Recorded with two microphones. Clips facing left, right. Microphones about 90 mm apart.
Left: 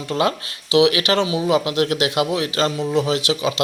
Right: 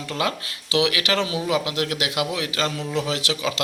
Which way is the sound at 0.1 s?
30° left (ahead or behind).